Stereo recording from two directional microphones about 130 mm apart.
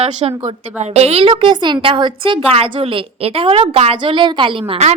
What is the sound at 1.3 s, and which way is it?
A woman's voice, 35° right (ahead or behind).